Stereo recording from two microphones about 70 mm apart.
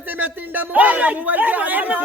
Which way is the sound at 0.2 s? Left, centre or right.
Right.